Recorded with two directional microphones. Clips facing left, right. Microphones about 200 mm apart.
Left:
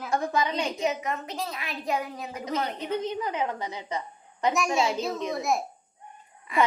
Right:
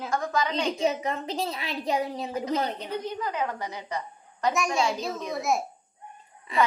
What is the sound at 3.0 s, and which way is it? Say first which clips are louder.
A woman's voice: left 1 dB; 25° left (ahead or behind).